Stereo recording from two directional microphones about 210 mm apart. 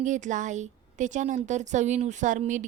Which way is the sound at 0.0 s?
35° right (ahead or behind).